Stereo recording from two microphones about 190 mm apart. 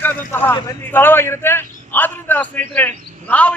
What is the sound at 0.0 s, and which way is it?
A man's voice, 10° left (ahead or behind).